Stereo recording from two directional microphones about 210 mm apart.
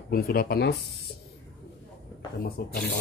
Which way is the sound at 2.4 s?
45° left (ahead or behind).